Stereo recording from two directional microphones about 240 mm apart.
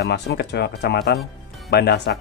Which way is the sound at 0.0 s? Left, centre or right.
Left.